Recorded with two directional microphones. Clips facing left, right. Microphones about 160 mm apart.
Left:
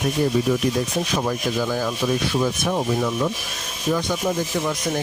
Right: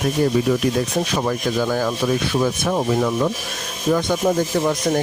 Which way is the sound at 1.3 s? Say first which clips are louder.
Right 3 dB; 60° right (ahead or behind).